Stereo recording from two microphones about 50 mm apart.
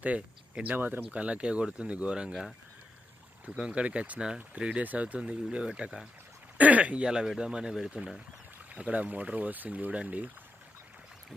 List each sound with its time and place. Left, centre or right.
0.6 s speech: right
1.1 s speech: right
3.6 s speech: centre
3.8 s speech: right
6.6 s speech: right
7.1 s speech: centre
8.7 s speech: right